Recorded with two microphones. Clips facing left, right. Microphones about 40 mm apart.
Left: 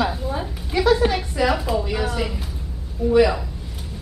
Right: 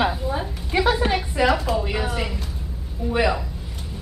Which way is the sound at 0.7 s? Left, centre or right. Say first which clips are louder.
Left 2 dB; centre.